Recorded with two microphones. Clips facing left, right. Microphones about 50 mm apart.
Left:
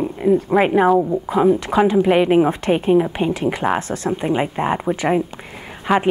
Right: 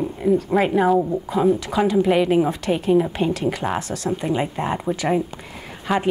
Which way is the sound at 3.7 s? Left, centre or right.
Left.